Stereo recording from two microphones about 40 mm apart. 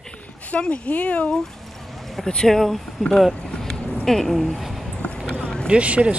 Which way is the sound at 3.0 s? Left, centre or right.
Centre.